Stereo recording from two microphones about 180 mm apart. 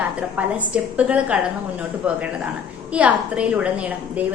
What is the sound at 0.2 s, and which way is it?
A woman's voice, 5° right (ahead or behind).